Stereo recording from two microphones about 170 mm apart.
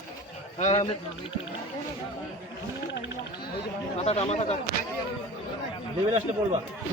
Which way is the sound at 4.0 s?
35° left (ahead or behind).